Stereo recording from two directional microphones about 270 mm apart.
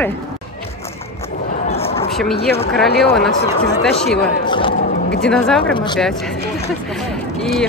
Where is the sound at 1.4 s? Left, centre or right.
Left.